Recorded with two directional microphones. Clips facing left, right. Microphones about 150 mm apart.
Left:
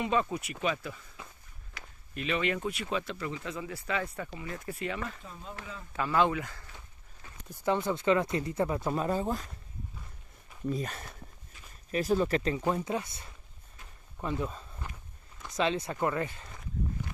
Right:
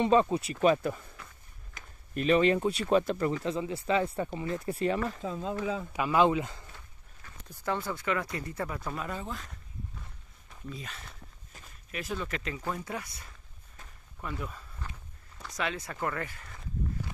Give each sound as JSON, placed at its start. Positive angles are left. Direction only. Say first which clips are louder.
{"t": 0.0, "sound": "speech", "louder": "right 6 dB", "side_deg": -30}
{"t": 2.9, "sound": "speech", "louder": "right 12 dB", "side_deg": -45}
{"t": 3.4, "sound": "speech", "louder": "right 6 dB", "side_deg": -25}
{"t": 5.2, "sound": "speech", "louder": "right 12 dB", "side_deg": -90}
{"t": 5.9, "sound": "speech", "louder": "right 2 dB", "side_deg": -15}
{"t": 7.2, "sound": "speech", "louder": "left 4 dB", "side_deg": 20}
{"t": 10.7, "sound": "speech", "louder": "left 9 dB", "side_deg": 45}
{"t": 12.6, "sound": "speech", "louder": "left 5 dB", "side_deg": 20}